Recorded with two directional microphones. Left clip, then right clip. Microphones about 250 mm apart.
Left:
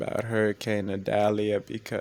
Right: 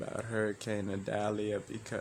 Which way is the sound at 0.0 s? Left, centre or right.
Left.